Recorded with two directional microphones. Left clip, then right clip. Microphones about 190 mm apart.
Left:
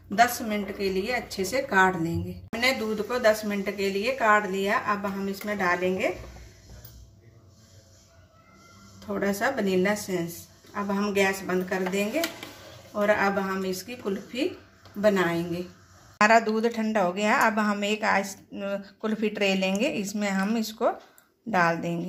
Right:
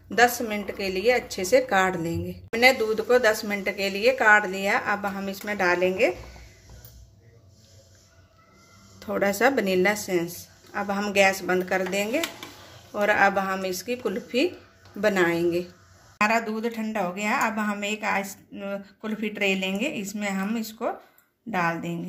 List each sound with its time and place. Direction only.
0.7 s a woman's voice: 45° right (ahead or behind)
9.0 s a woman's voice: 50° right (ahead or behind)
13.0 s a woman's voice: 45° right (ahead or behind)
16.2 s a woman's voice: 30° left (ahead or behind)